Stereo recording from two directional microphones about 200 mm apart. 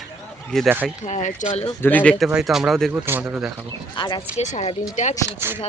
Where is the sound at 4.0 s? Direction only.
25° left (ahead or behind).